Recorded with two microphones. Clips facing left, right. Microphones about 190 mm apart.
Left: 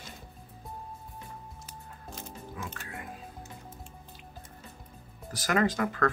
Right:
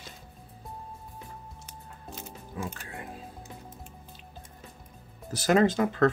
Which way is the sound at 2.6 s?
30° right (ahead or behind).